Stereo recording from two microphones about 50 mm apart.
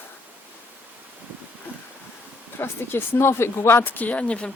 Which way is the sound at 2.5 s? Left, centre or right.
Left.